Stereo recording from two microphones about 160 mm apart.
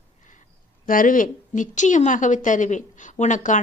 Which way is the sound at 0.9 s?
55° left (ahead or behind).